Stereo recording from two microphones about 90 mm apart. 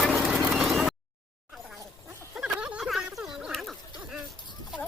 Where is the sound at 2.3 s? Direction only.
10° right (ahead or behind).